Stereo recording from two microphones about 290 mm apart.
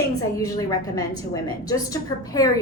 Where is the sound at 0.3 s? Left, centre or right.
Centre.